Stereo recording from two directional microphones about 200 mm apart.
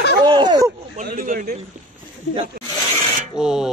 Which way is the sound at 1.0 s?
45° right (ahead or behind).